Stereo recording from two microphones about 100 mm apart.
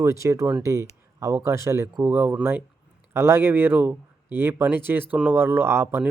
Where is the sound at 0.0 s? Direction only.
30° right (ahead or behind).